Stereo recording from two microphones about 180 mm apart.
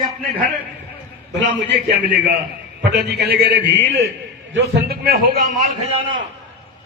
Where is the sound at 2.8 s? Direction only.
70° right (ahead or behind).